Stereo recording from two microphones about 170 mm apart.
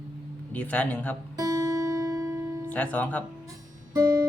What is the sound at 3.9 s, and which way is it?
Music, 15° right (ahead or behind).